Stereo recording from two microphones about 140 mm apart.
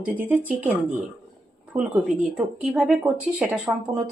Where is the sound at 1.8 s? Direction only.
5° right (ahead or behind).